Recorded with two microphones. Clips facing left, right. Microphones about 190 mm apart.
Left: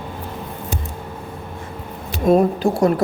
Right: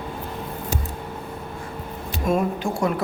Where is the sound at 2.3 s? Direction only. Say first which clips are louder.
Left 8 dB; 35° left (ahead or behind).